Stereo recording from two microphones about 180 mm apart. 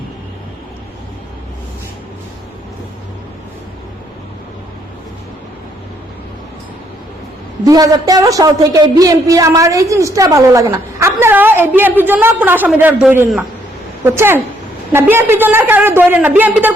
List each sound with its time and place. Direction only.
7.6 s a man's voice: 20° right (ahead or behind)